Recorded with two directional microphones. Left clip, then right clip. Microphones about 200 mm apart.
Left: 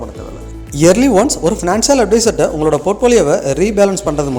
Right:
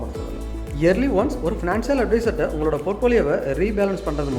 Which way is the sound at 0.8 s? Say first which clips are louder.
Left 9 dB; 45° left (ahead or behind).